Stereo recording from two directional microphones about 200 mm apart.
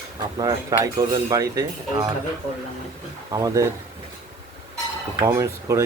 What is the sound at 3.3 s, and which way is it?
Speech, 20° right (ahead or behind).